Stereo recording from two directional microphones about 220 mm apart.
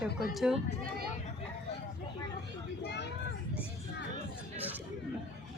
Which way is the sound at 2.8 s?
50° left (ahead or behind).